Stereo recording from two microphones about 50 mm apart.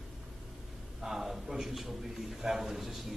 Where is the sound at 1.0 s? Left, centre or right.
Centre.